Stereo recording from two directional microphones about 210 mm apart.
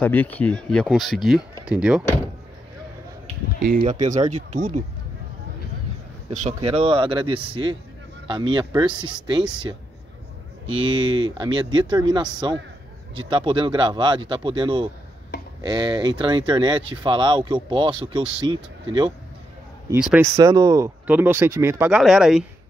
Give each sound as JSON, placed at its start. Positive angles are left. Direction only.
{"t": 0.0, "sound": "speech", "side_deg": 10}
{"t": 3.6, "sound": "speech", "side_deg": -45}
{"t": 4.0, "sound": "speech", "side_deg": -35}
{"t": 6.3, "sound": "speech", "side_deg": -30}